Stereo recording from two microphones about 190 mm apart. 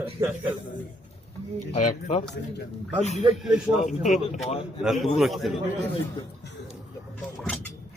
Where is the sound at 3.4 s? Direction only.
Centre (ahead or behind).